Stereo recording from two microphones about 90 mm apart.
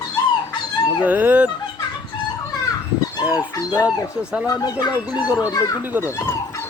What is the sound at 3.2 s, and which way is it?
Dog, 15° right (ahead or behind).